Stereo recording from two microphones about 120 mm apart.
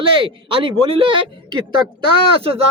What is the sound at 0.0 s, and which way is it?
A man's voice, 45° right (ahead or behind).